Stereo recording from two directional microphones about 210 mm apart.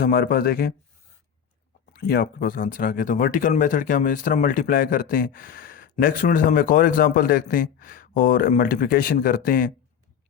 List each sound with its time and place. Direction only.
0.0 s speech: 45° left (ahead or behind)
1.9 s speech: 50° left (ahead or behind)